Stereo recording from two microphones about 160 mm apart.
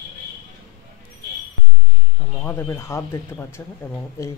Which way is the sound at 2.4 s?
15° left (ahead or behind).